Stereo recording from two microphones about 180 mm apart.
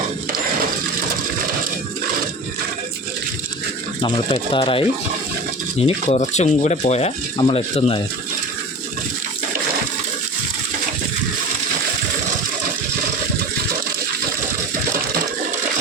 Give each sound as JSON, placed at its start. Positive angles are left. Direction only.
{"t": 4.5, "sound": "speech", "side_deg": 30}
{"t": 5.8, "sound": "speech", "side_deg": 40}